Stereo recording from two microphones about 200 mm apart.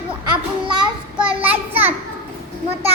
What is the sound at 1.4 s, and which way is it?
Speech, 10° right (ahead or behind).